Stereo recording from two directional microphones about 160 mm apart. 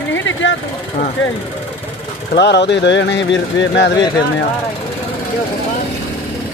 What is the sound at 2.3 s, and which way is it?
Speech, 90° left.